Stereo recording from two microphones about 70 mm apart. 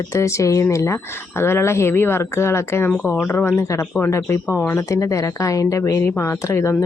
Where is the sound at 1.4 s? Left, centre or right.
Left.